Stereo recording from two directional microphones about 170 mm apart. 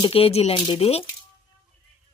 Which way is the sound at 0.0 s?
35° left (ahead or behind).